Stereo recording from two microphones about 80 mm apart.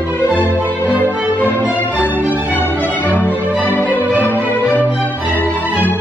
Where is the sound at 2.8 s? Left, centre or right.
Left.